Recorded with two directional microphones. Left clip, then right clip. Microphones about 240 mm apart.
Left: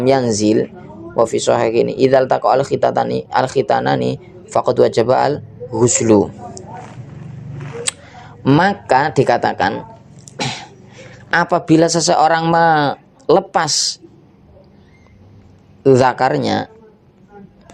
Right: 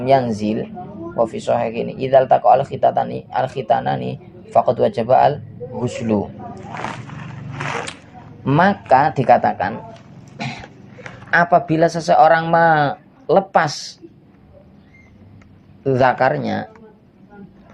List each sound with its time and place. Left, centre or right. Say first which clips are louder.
0.0 s speech: left 2 dB; left
6.7 s walk: right 6 dB; centre
8.4 s speech: left 1 dB; left
10.3 s a sound: left 6 dB; left
11.3 s speech: even; left
15.8 s speech: left 3 dB; left